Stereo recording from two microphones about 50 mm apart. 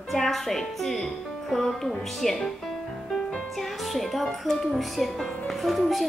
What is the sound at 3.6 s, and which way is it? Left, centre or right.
A woman's voice, centre.